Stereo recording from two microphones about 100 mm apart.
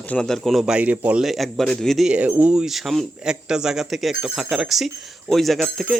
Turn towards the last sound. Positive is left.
turn(degrees=0)  # may be behind; listen again after turning